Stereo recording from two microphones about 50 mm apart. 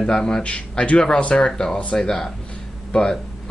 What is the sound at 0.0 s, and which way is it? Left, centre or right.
Speech, centre.